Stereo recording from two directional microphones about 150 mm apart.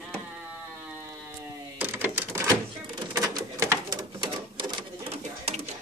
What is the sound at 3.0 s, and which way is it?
Bird, 25° right (ahead or behind).